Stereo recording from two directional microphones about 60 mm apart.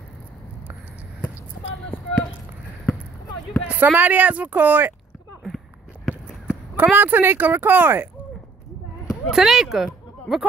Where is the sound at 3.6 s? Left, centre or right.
Right.